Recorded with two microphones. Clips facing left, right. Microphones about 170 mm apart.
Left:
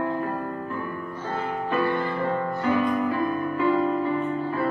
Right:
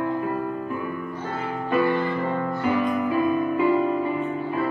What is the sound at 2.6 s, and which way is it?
Music, 15° right (ahead or behind).